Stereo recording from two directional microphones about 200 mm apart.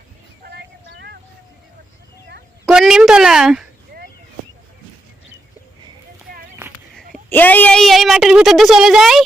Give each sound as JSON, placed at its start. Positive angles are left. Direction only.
{"t": 0.4, "sound": "vehicle", "side_deg": -55}
{"t": 2.6, "sound": "speech", "side_deg": 0}
{"t": 7.3, "sound": "speech", "side_deg": 10}